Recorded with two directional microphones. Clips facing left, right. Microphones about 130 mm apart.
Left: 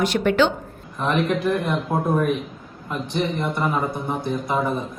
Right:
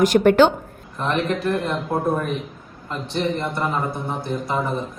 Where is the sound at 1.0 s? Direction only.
Centre (ahead or behind).